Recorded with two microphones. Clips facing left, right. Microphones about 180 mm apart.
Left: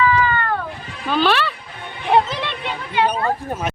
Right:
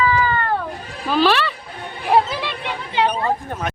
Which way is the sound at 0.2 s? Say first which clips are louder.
Even; 30° right (ahead or behind).